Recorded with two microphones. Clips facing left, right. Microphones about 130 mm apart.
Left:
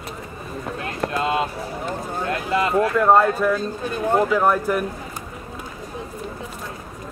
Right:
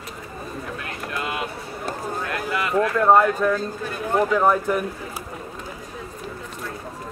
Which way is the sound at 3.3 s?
10° left (ahead or behind).